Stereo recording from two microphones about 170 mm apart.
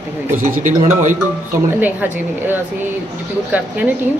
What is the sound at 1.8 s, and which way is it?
A man's voice, 10° right (ahead or behind).